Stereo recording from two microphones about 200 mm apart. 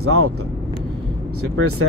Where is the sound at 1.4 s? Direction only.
90° right.